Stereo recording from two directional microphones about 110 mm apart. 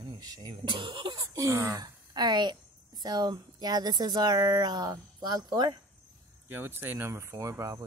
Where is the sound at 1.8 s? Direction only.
40° right (ahead or behind).